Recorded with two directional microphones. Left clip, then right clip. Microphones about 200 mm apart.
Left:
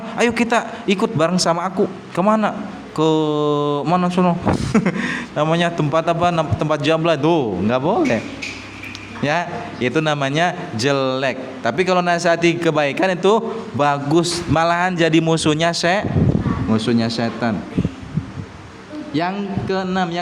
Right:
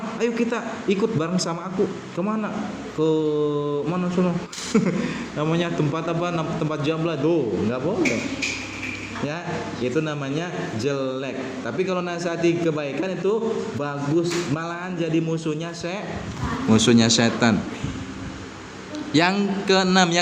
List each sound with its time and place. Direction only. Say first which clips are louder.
0.2 s a man's voice: left 8 dB; 40° left (ahead or behind)
4.7 s a man's voice: left 4 dB; 30° left (ahead or behind); by 7.8 s 45° left (ahead or behind)
9.8 s a man's voice: left 8 dB; 45° left (ahead or behind)
16.6 s a man's voice: right 4 dB; 5° left (ahead or behind)
19.1 s a man's voice: right 2 dB; centre (ahead or behind)